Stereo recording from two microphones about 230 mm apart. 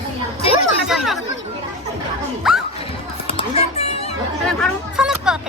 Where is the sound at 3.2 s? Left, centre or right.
Left.